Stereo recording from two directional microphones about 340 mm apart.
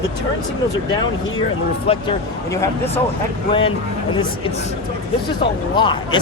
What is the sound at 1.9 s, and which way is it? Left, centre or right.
Speech, centre.